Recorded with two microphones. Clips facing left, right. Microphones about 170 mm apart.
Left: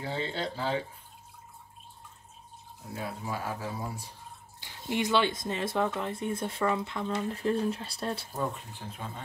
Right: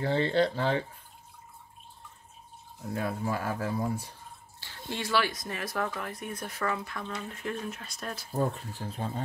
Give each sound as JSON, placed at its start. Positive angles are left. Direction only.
{"t": 0.0, "sound": "speech", "side_deg": -65}
{"t": 2.9, "sound": "speech", "side_deg": -55}
{"t": 4.6, "sound": "speech", "side_deg": 15}
{"t": 8.4, "sound": "speech", "side_deg": -40}